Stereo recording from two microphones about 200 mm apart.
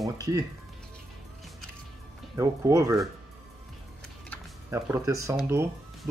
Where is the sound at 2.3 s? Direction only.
15° right (ahead or behind).